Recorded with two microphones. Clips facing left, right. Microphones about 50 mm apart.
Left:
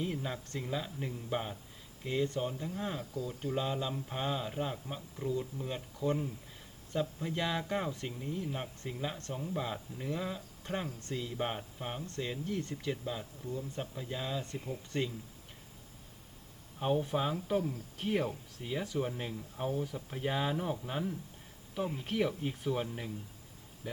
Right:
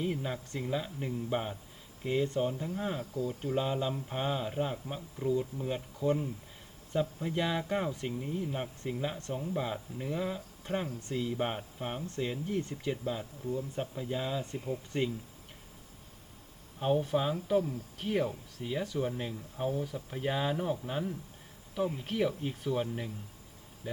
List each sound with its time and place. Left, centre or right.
0.0 s speech: centre
3.1 s speech: right
3.4 s speech: centre
16.8 s speech: centre